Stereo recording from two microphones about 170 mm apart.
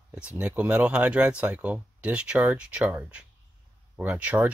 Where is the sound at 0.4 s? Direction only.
5° right (ahead or behind).